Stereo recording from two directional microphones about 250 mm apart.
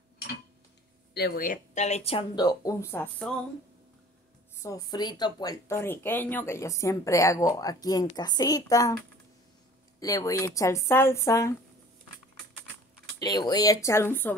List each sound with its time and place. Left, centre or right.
1.1 s speech: left; by 3.3 s centre
4.6 s speech: centre
9.9 s speech: centre
13.2 s speech: centre